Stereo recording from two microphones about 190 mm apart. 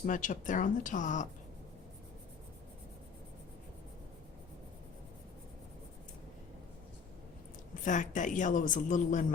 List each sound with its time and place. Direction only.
0.0 s speech: 40° left (ahead or behind)
7.9 s speech: 40° left (ahead or behind)